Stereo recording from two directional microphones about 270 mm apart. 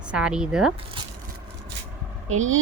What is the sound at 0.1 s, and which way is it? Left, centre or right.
Speech, centre.